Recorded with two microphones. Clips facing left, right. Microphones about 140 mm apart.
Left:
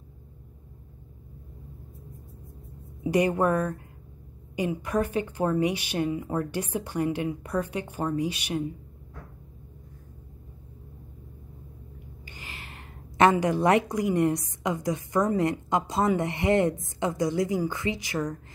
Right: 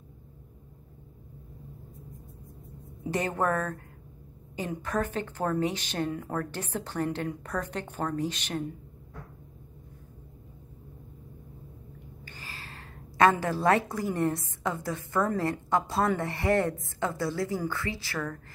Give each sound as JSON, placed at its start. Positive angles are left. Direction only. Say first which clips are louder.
{"t": 3.0, "sound": "a woman's voice", "louder": "left 6 dB", "side_deg": 10}
{"t": 12.3, "sound": "a woman's voice", "louder": "left 1 dB", "side_deg": 20}